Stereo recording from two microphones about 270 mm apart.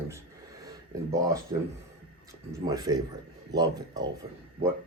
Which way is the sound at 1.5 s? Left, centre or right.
Centre.